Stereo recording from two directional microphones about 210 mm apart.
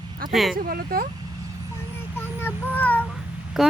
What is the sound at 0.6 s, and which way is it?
Speech, 45° right (ahead or behind).